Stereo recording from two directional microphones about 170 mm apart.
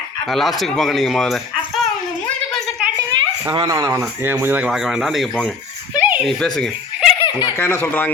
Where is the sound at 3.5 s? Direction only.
20° right (ahead or behind); by 7.0 s 5° left (ahead or behind).